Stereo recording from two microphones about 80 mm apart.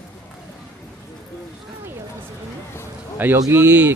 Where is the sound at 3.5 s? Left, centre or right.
Right.